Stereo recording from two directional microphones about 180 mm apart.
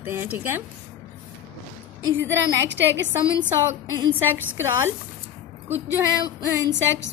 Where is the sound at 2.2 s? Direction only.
85° right.